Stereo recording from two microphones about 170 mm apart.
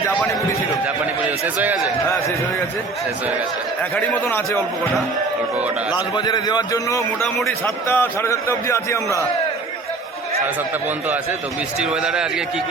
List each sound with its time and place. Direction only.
1.6 s a man's voice: 10° right (ahead or behind)
3.9 s a man's voice: 10° left (ahead or behind)
5.9 s a man's voice: 25° left (ahead or behind)
7.3 s a man's voice: centre (ahead or behind)
7.9 s a man's voice: 10° left (ahead or behind)
11.8 s a man's voice: 5° right (ahead or behind)